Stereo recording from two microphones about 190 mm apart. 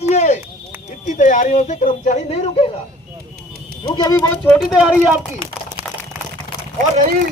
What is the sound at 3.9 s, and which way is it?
Speech, 20° left (ahead or behind).